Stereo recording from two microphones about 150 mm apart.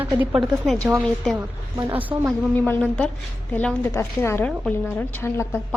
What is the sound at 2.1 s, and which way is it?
Speech, 30° right (ahead or behind).